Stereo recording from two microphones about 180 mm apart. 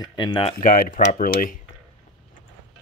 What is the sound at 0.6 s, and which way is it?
Speech, 50° left (ahead or behind).